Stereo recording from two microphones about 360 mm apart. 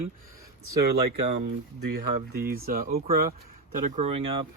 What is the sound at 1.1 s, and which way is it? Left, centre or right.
Speech, right.